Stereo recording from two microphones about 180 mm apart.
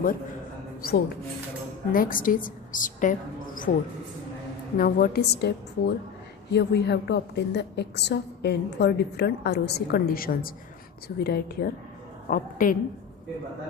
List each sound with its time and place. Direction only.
0.8 s a woman's voice: 60° left (ahead or behind)
4.8 s a woman's voice: 50° left (ahead or behind)
12.3 s a woman's voice: 50° left (ahead or behind)